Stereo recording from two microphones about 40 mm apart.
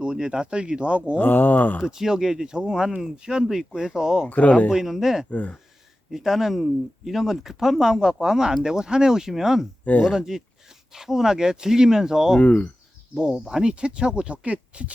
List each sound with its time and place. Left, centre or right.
0.0 s speech: right
1.1 s speech: left
1.8 s speech: centre
4.3 s speech: left
4.7 s speech: centre
5.3 s speech: left
6.1 s speech: centre
12.4 s speech: left
13.3 s speech: centre
14.4 s speech: right